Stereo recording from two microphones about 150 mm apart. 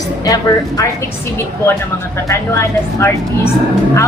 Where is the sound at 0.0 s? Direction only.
25° left (ahead or behind).